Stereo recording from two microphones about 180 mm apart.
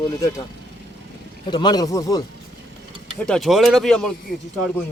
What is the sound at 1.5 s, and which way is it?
Speech, 25° left (ahead or behind).